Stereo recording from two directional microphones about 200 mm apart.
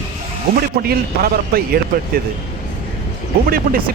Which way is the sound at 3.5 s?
45° right (ahead or behind).